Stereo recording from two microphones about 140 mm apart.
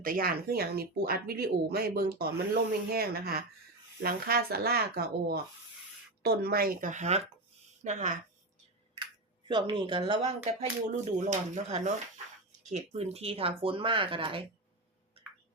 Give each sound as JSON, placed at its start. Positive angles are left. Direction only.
{"t": 0.0, "sound": "speech", "side_deg": -90}
{"t": 9.5, "sound": "speech", "side_deg": -35}
{"t": 10.9, "sound": "speech", "side_deg": -60}